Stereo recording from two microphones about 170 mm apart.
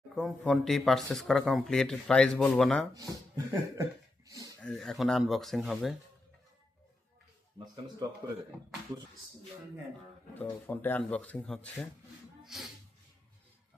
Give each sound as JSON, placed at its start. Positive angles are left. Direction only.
{"t": 0.2, "sound": "speech", "side_deg": 0}
{"t": 2.9, "sound": "speech", "side_deg": -20}
{"t": 4.3, "sound": "a sound", "side_deg": -20}
{"t": 4.6, "sound": "speech", "side_deg": 5}
{"t": 10.3, "sound": "speech", "side_deg": 10}